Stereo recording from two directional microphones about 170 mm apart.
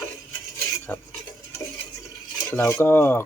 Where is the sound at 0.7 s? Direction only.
15° left (ahead or behind).